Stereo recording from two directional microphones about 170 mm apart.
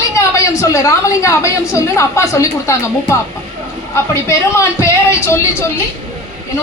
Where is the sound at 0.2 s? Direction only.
20° left (ahead or behind).